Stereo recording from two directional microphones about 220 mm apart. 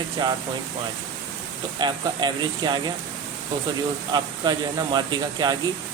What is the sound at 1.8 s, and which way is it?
Speech, 20° right (ahead or behind).